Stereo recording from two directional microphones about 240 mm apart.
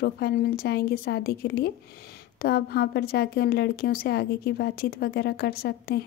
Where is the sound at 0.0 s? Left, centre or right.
Left.